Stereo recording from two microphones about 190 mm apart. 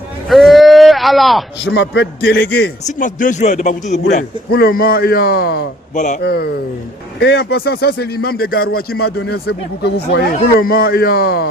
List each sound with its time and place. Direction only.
0.3 s a sound: centre (ahead or behind)
1.7 s speech: 75° left (ahead or behind); by 2.6 s 60° left (ahead or behind)
2.8 s speech: 45° left (ahead or behind)
4.5 s a man's voice: 50° left (ahead or behind)
6.0 s speech: 40° left (ahead or behind)
6.2 s a man's voice: 55° left (ahead or behind)